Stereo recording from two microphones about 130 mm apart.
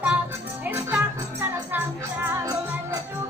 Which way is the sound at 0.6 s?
15° right (ahead or behind).